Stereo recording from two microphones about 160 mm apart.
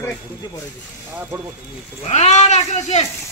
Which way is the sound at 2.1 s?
45° left (ahead or behind).